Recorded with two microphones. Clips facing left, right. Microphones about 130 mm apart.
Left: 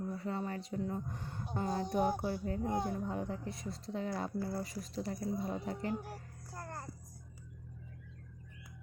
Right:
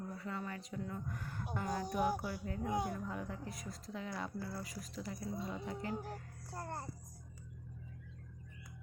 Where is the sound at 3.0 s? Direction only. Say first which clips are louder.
Left 5 dB; 30° left (ahead or behind).